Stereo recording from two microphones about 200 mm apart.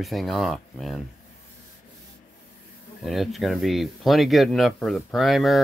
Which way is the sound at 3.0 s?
Centre (ahead or behind).